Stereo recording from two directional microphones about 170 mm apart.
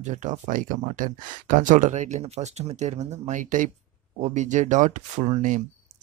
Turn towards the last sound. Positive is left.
turn(degrees=-45)  # may be behind; listen again after turning